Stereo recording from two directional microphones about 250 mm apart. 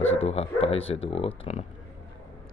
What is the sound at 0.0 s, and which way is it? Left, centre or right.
Speech, left.